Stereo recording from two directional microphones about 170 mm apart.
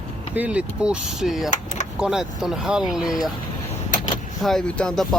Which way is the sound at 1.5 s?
45° left (ahead or behind).